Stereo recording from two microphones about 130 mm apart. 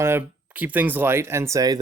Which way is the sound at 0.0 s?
20° right (ahead or behind).